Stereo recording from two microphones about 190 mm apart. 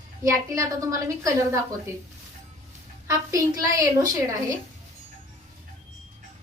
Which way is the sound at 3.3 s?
20° right (ahead or behind).